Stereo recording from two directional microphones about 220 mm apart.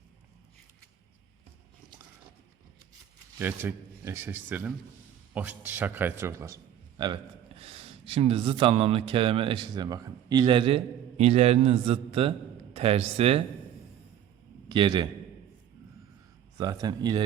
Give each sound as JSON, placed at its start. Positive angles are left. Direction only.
{"t": 3.3, "sound": "a man's voice", "side_deg": -10}
{"t": 14.7, "sound": "a man's voice", "side_deg": -20}
{"t": 16.6, "sound": "a man's voice", "side_deg": -20}